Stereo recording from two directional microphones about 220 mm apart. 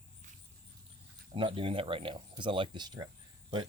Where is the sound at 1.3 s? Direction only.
25° right (ahead or behind).